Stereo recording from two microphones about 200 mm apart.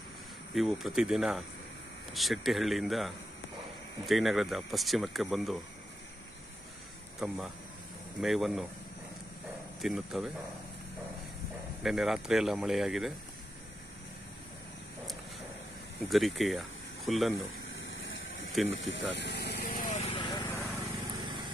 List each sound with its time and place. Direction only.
0.6 s speech: centre (ahead or behind)
7.2 s speech: centre (ahead or behind)
9.8 s speech: centre (ahead or behind)
11.8 s speech: centre (ahead or behind)
16.1 s speech: centre (ahead or behind)
17.7 s vehicle: 75° left (ahead or behind)
18.7 s vehicle: 65° left (ahead or behind); by 20.6 s 25° left (ahead or behind)
20.6 s vehicle: 15° right (ahead or behind)